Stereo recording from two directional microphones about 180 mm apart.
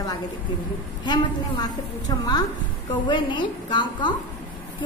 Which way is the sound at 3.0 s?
25° left (ahead or behind).